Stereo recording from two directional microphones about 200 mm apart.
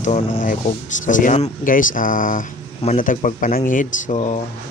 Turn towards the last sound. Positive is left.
turn(degrees=35)  # may be behind; listen again after turning